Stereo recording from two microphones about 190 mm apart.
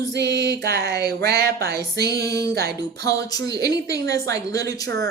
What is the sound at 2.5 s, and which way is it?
Music, 55° right (ahead or behind).